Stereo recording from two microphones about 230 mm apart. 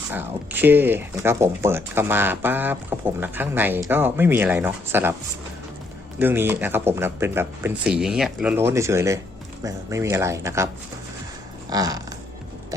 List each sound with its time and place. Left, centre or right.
0.1 s speech: centre
6.1 s speech: centre
11.7 s speech: centre